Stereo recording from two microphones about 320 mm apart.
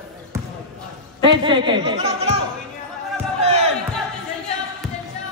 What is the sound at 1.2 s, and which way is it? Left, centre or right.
Speech, centre.